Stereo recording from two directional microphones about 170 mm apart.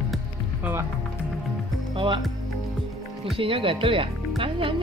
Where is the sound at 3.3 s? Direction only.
30° right (ahead or behind).